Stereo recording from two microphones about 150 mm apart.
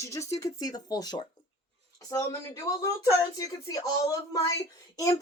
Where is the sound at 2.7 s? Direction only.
20° left (ahead or behind).